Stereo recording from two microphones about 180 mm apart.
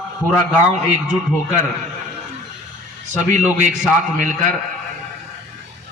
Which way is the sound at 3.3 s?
45° right (ahead or behind).